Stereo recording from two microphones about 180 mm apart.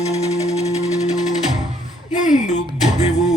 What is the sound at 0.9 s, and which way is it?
Music, 20° left (ahead or behind).